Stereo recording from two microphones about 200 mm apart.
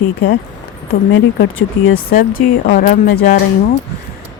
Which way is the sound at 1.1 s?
75° left (ahead or behind).